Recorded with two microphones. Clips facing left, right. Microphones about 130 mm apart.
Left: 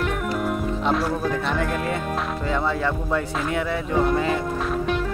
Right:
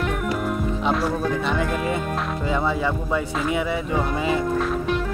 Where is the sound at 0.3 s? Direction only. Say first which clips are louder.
Even; centre (ahead or behind).